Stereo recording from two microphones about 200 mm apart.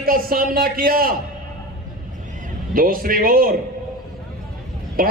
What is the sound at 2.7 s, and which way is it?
Speech, 45° right (ahead or behind).